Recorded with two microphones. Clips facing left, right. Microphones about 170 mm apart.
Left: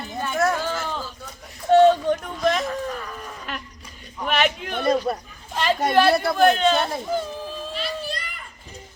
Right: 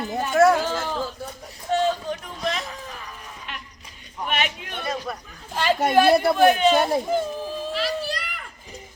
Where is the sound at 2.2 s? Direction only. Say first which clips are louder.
Left 6 dB; 40° left (ahead or behind).